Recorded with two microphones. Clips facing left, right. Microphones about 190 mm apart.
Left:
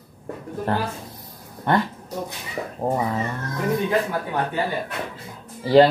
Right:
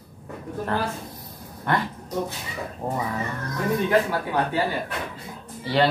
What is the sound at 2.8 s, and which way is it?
Speech, 35° left (ahead or behind).